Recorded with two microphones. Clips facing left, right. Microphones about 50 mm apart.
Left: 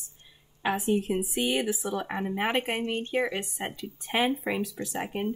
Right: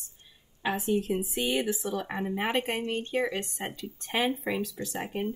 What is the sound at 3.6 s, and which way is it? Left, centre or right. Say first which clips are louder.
A woman's voice: left 1 dB; centre.